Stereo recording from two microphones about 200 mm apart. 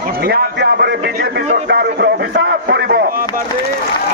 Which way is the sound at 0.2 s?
50° right (ahead or behind).